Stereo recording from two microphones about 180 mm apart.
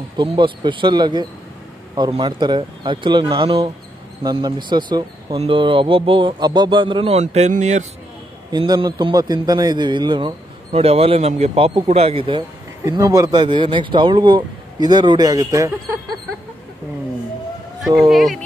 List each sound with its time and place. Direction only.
0.2 s a man's voice: 25° right (ahead or behind)
8.5 s a man's voice: 25° right (ahead or behind)
18.0 s speech: centre (ahead or behind)